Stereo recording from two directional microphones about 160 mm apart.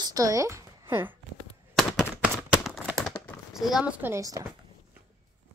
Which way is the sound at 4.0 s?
20° right (ahead or behind).